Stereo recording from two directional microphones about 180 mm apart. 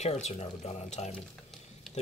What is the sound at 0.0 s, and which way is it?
Speech, 40° left (ahead or behind).